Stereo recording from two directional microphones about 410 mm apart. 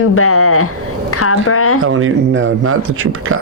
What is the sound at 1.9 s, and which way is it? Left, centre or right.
Speech, right.